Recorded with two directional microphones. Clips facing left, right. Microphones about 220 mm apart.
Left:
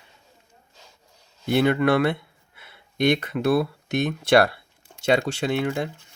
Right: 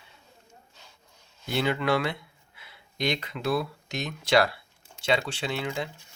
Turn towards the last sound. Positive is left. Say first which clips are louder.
# left 7 dB
turn(degrees=50)  # may be behind; listen again after turning